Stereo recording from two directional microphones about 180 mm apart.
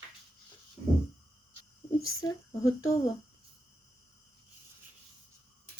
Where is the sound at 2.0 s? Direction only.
20° left (ahead or behind).